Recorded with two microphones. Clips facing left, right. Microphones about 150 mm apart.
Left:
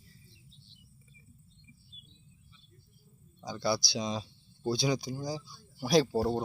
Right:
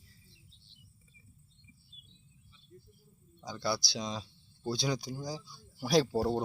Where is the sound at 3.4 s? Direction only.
10° left (ahead or behind).